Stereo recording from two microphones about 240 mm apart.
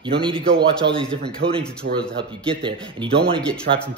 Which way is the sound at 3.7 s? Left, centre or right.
Right.